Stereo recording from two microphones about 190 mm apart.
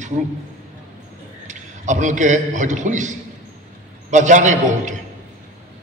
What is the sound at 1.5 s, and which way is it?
A man's voice, 40° right (ahead or behind).